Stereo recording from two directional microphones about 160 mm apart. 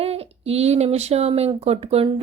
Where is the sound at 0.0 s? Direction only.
40° right (ahead or behind).